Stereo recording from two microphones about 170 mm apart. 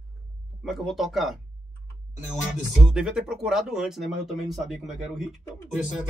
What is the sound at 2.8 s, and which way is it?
Speech, 5° right (ahead or behind).